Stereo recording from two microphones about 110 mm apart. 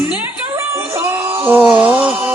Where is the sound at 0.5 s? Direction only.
20° right (ahead or behind).